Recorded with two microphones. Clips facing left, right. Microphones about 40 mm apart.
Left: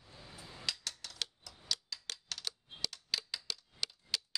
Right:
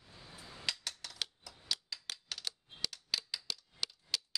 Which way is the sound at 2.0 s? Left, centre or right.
Centre.